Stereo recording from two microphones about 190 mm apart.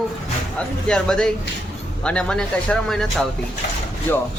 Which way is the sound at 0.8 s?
5° left (ahead or behind).